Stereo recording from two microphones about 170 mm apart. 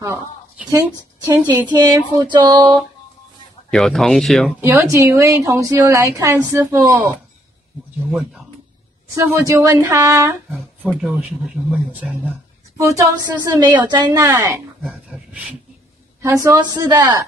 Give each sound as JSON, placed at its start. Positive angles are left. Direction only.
{"t": 1.2, "sound": "a woman's voice", "side_deg": -25}
{"t": 3.7, "sound": "speech", "side_deg": 0}
{"t": 4.6, "sound": "a woman's voice", "side_deg": -15}
{"t": 8.1, "sound": "speech", "side_deg": 0}
{"t": 9.1, "sound": "a woman's voice", "side_deg": -15}
{"t": 10.8, "sound": "speech", "side_deg": 0}
{"t": 14.8, "sound": "speech", "side_deg": -5}
{"t": 16.2, "sound": "speech", "side_deg": -15}